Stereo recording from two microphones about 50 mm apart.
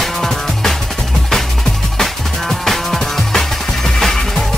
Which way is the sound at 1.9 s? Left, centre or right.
Centre.